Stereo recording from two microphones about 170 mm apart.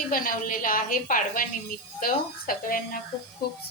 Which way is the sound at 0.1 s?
55° left (ahead or behind).